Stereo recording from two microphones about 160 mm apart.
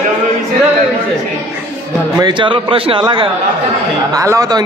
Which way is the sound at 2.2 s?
30° right (ahead or behind).